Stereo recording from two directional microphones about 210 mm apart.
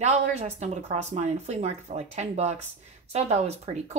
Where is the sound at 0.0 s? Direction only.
30° right (ahead or behind).